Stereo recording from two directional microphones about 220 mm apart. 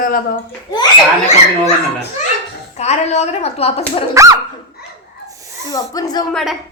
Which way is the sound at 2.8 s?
30° left (ahead or behind).